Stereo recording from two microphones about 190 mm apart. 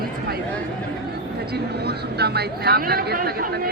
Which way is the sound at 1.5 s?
55° right (ahead or behind).